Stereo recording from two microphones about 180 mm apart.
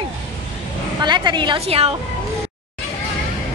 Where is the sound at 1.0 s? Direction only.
25° right (ahead or behind).